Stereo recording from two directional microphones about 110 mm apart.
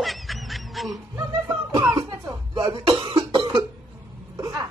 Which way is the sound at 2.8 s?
40° right (ahead or behind).